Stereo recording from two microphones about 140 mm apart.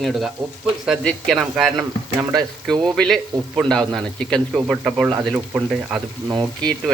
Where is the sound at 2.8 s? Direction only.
5° left (ahead or behind).